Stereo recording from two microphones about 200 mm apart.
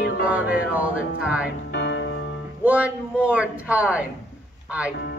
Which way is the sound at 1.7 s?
65° left (ahead or behind).